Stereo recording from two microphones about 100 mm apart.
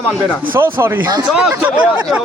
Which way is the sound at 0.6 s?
25° right (ahead or behind).